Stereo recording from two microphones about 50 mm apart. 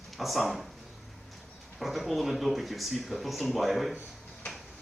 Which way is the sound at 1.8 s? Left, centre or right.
Centre.